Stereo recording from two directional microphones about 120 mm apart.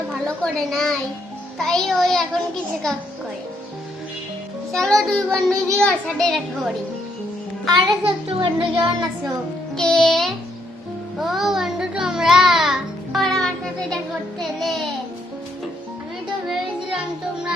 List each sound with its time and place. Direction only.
0.1 s a child's voice: centre (ahead or behind)
4.7 s a child's voice: 5° left (ahead or behind)
7.7 s a child's voice: 45° right (ahead or behind)
9.7 s a child's voice: 5° left (ahead or behind)
11.2 s music: centre (ahead or behind)
13.9 s a child's voice: centre (ahead or behind)